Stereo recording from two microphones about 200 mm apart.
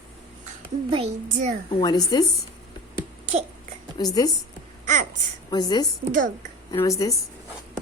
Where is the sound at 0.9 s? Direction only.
25° right (ahead or behind).